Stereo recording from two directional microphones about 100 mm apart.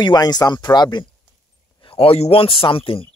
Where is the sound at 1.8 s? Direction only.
70° left (ahead or behind).